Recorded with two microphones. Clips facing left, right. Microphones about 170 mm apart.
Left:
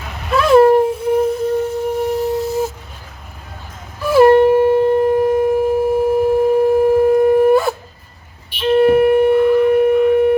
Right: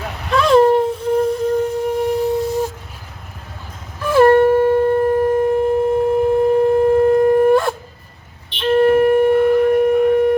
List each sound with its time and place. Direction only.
0.3 s a sound: 5° left (ahead or behind)
4.0 s shofar: 10° left (ahead or behind)
8.5 s music: 10° left (ahead or behind)
9.7 s shofar: 5° left (ahead or behind)